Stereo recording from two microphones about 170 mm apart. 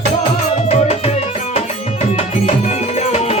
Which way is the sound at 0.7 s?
40° left (ahead or behind).